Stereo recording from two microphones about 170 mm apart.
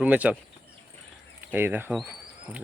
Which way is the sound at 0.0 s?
10° right (ahead or behind).